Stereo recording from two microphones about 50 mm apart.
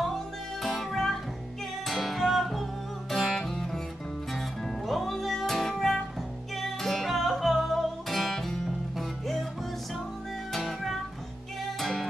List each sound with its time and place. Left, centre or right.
0.0 s music: centre
10.5 s music: centre